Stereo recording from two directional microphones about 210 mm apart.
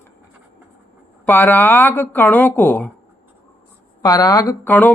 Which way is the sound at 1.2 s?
10° left (ahead or behind).